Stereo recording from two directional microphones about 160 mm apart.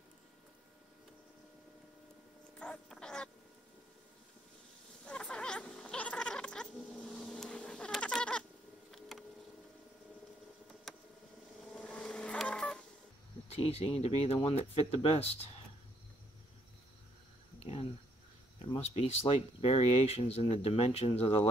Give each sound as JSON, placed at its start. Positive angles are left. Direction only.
{"t": 2.6, "sound": "duck", "side_deg": 5}
{"t": 5.0, "sound": "cat", "side_deg": 5}
{"t": 9.1, "sound": "a sound", "side_deg": 0}
{"t": 10.9, "sound": "a sound", "side_deg": 0}
{"t": 11.7, "sound": "vehicle", "side_deg": 5}
{"t": 13.5, "sound": "speech", "side_deg": 40}
{"t": 18.7, "sound": "speech", "side_deg": 40}